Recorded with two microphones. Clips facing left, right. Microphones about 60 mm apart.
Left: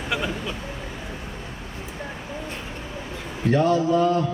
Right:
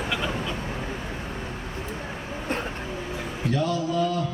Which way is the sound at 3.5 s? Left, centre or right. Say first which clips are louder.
Left 6 dB; left.